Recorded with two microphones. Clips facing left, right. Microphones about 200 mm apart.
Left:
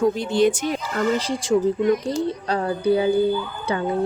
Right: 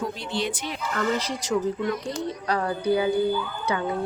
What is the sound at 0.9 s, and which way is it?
Speech, 30° left (ahead or behind).